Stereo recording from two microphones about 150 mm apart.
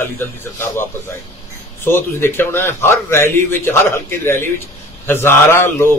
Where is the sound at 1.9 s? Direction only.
15° left (ahead or behind).